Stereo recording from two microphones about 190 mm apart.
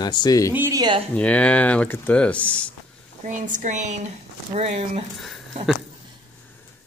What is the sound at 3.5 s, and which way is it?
Speech, 40° right (ahead or behind).